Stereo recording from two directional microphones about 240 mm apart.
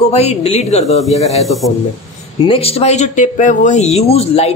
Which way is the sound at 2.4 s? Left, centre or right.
Left.